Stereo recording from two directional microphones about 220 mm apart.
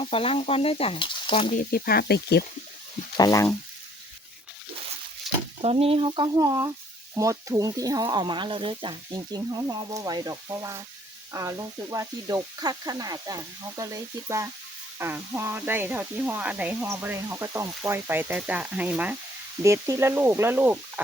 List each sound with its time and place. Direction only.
0.0 s speech: 25° left (ahead or behind)
1.5 s speech: 40° left (ahead or behind)
3.2 s speech: 15° left (ahead or behind)
5.6 s speech: 25° right (ahead or behind); by 21.0 s 10° right (ahead or behind)